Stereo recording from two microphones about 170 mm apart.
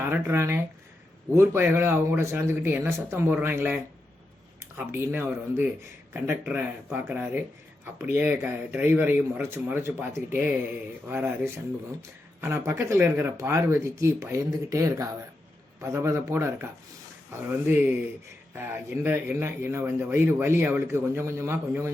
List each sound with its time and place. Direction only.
0.0 s speech: 15° right (ahead or behind)
4.8 s speech: 15° right (ahead or behind)
18.5 s speech: 15° right (ahead or behind)